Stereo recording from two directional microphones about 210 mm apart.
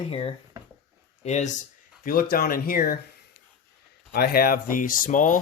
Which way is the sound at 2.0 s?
45° left (ahead or behind).